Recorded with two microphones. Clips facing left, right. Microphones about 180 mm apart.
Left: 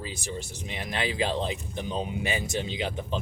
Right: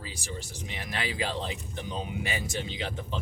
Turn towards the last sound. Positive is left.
turn(degrees=20)  # may be behind; listen again after turning